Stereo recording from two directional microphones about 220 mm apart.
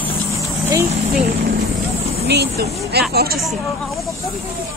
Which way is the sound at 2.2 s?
50° right (ahead or behind).